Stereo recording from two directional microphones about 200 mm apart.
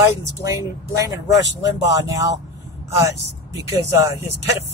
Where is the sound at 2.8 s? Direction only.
15° right (ahead or behind).